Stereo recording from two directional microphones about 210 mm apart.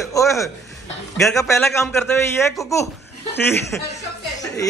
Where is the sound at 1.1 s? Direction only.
Centre (ahead or behind).